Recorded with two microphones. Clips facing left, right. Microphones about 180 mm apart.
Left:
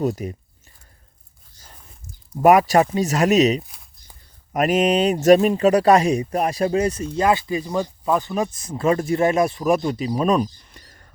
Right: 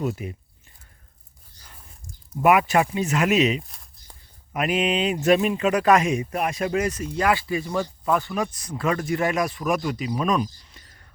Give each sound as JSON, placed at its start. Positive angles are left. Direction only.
{"t": 0.0, "sound": "speech", "side_deg": 40}
{"t": 2.4, "sound": "speech", "side_deg": 40}
{"t": 3.6, "sound": "a sound", "side_deg": 0}
{"t": 4.5, "sound": "speech", "side_deg": 45}
{"t": 10.6, "sound": "whispering", "side_deg": 50}